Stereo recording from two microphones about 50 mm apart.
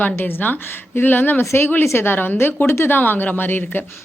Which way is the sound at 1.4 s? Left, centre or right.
Left.